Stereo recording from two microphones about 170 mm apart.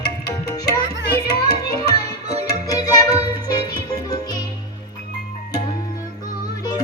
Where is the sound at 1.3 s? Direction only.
25° left (ahead or behind).